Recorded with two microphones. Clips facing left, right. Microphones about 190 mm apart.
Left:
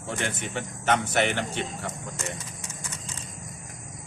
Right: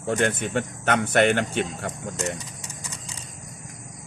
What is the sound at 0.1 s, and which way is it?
Speech, 55° right (ahead or behind).